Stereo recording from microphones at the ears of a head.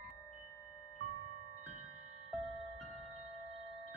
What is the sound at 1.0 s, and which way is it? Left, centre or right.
Music, right.